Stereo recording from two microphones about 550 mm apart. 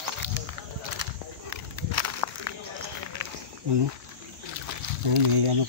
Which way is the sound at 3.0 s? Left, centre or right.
Right.